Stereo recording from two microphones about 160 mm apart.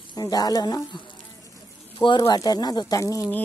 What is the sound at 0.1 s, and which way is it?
Speech, 25° left (ahead or behind).